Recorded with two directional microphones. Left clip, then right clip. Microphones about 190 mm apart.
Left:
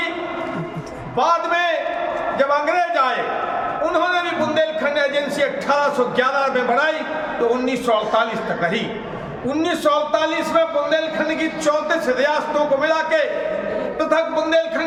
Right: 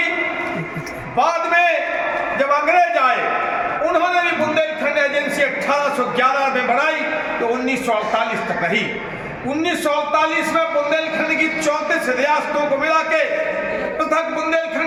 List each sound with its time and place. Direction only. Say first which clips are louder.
2.4 s a man's voice: right 3 dB; 15° left (ahead or behind)
4.5 s a man's voice: right 1 dB; 15° left (ahead or behind)
9.8 s a man's voice: even; 10° left (ahead or behind)
11.6 s a man's voice: even; 10° left (ahead or behind)